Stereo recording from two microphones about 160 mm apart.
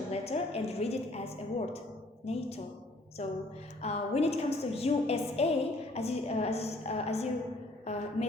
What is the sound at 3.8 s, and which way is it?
A woman's voice, 40° left (ahead or behind).